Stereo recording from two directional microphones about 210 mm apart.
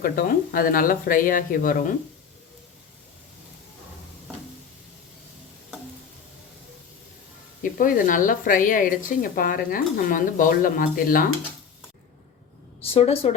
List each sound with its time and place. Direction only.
0.0 s speech: 45° left (ahead or behind)
7.6 s speech: 40° left (ahead or behind)
12.8 s a woman's voice: 30° left (ahead or behind)